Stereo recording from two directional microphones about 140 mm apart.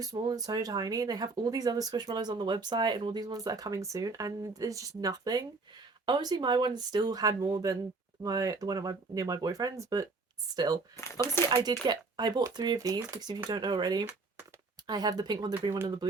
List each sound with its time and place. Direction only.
0.0 s speech: 25° right (ahead or behind)
10.9 s speech: 20° left (ahead or behind)
11.4 s speech: 30° right (ahead or behind)